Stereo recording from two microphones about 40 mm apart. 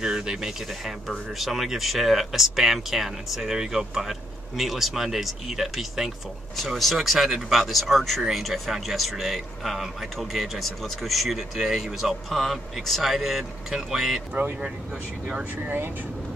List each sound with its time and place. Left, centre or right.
0.0 s speech: centre
1.0 s speech: centre
15.5 s speech: right